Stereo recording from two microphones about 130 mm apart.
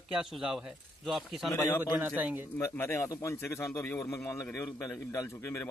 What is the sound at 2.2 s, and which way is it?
Speech, 10° right (ahead or behind).